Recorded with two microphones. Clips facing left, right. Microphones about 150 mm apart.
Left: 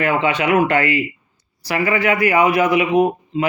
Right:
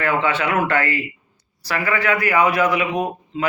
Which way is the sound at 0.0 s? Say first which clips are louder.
Left 2 dB; 15° left (ahead or behind).